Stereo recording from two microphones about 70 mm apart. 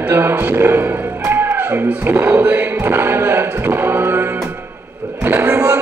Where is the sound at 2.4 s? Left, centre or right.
Right.